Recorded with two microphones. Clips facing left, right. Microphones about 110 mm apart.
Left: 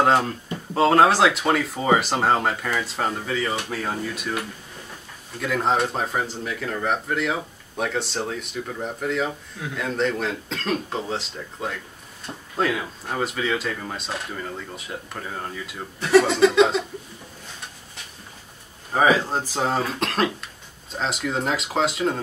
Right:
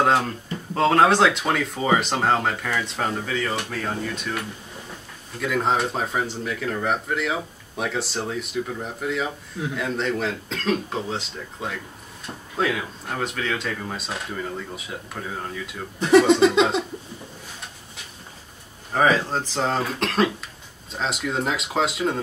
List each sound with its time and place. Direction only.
0.0 s speech: centre (ahead or behind)
5.4 s speech: centre (ahead or behind)
16.0 s speech: 20° right (ahead or behind)
18.9 s speech: 10° left (ahead or behind)